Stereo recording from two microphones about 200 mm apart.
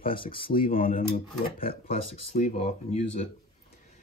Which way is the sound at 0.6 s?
45° left (ahead or behind).